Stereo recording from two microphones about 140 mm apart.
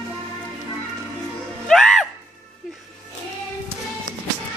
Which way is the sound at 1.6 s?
Centre (ahead or behind).